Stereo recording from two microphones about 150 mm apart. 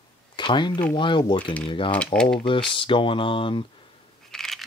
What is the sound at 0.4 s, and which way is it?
Speech, 30° left (ahead or behind).